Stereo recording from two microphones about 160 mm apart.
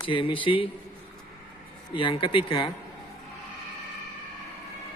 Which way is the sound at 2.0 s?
30° left (ahead or behind).